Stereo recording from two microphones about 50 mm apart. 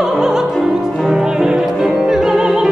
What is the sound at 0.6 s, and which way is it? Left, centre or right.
Music, centre.